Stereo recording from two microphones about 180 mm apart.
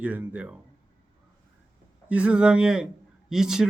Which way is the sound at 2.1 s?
5° right (ahead or behind).